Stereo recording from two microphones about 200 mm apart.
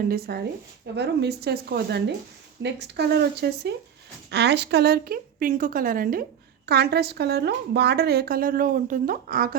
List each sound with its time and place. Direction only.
0.0 s a woman's voice: 50° right (ahead or behind)